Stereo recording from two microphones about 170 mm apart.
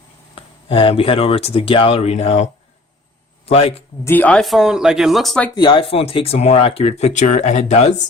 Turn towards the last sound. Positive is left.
turn(degrees=40)  # may be behind; listen again after turning